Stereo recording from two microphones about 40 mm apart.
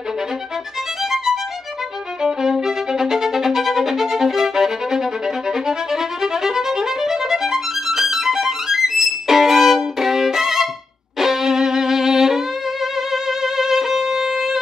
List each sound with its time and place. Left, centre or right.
1.1 s music: centre
2.2 s violin: centre
6.2 s violin: centre
11.1 s music: centre